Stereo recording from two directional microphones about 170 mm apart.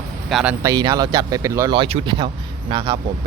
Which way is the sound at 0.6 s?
20° right (ahead or behind).